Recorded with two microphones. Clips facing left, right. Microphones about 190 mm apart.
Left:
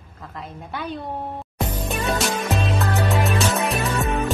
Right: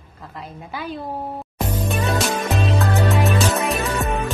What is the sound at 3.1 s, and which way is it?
Music, centre (ahead or behind).